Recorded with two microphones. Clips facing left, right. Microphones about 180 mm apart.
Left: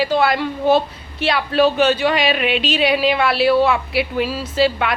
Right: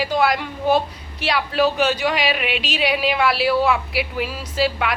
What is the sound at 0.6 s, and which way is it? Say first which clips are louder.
Speech: left 2 dB; 25° left (ahead or behind).